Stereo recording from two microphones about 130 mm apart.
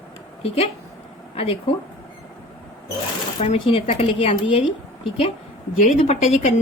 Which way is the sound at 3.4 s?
45° left (ahead or behind).